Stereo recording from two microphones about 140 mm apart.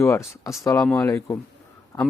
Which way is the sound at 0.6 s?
25° left (ahead or behind).